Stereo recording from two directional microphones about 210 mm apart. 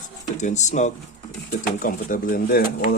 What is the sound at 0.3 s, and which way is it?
Speech, 35° left (ahead or behind).